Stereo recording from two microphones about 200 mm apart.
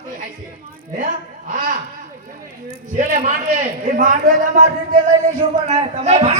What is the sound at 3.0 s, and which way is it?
A man's voice, 40° right (ahead or behind).